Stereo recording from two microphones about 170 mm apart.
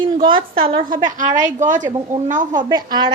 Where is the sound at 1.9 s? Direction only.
30° right (ahead or behind).